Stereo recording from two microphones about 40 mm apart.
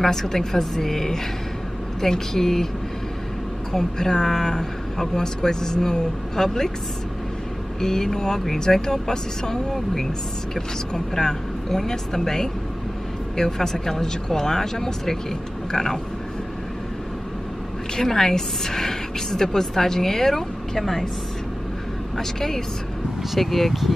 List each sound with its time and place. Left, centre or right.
0.0 s a woman's voice: centre
3.7 s a woman's voice: centre
7.8 s a woman's voice: centre
17.9 s a woman's voice: centre
22.1 s a woman's voice: centre